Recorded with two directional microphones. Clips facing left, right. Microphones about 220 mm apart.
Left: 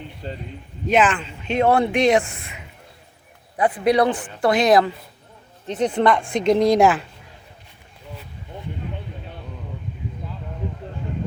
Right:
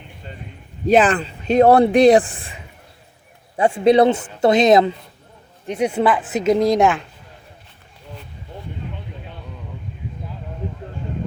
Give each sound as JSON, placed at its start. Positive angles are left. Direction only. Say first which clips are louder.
{"t": 0.2, "sound": "a sound", "louder": "left 6 dB", "side_deg": 35}
{"t": 0.9, "sound": "speech", "louder": "right 4 dB", "side_deg": -35}
{"t": 5.6, "sound": "speech", "louder": "right 1 dB", "side_deg": -10}